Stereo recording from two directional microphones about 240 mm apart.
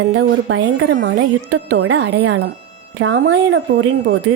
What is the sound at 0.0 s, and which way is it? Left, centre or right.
Speech, right.